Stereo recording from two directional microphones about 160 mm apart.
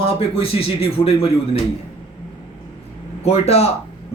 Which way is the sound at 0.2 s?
35° left (ahead or behind).